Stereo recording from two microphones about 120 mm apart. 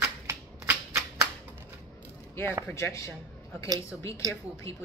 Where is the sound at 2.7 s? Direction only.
25° left (ahead or behind).